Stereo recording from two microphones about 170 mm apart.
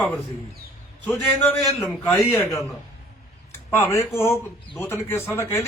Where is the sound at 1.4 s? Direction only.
10° left (ahead or behind).